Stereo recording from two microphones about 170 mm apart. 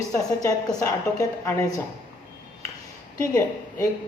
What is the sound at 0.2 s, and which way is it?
A woman's voice, 20° left (ahead or behind).